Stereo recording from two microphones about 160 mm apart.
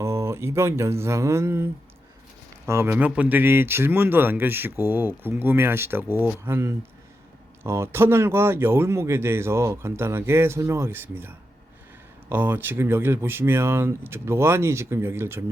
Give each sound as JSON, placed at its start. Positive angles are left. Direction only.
{"t": 0.0, "sound": "speech", "side_deg": -15}